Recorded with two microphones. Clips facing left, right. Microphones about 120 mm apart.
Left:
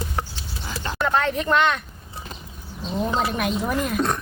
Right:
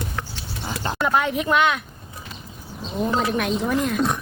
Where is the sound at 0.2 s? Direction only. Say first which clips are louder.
Left 3 dB; 30° left (ahead or behind).